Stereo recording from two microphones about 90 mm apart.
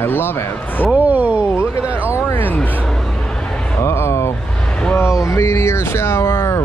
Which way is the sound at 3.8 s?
30° left (ahead or behind).